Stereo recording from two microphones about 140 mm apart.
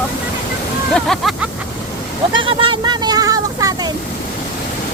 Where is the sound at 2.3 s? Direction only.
35° right (ahead or behind).